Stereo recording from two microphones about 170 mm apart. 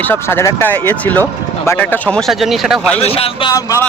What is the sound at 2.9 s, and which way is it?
Speech, 35° left (ahead or behind).